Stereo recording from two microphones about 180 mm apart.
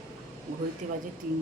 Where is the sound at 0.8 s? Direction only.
40° right (ahead or behind).